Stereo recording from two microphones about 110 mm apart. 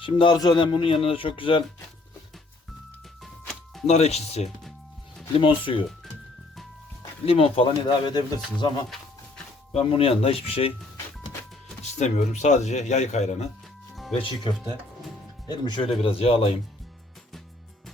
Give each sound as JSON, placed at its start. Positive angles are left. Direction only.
{"t": 0.0, "sound": "speech", "side_deg": 50}
{"t": 3.2, "sound": "music", "side_deg": 0}
{"t": 3.8, "sound": "speech", "side_deg": 75}
{"t": 5.4, "sound": "speech", "side_deg": 50}
{"t": 7.3, "sound": "speech", "side_deg": 65}
{"t": 7.9, "sound": "speech", "side_deg": 40}
{"t": 9.7, "sound": "speech", "side_deg": 65}
{"t": 11.9, "sound": "speech", "side_deg": 90}
{"t": 14.1, "sound": "speech", "side_deg": 55}
{"t": 15.4, "sound": "speech", "side_deg": 40}
{"t": 16.0, "sound": "speech", "side_deg": 65}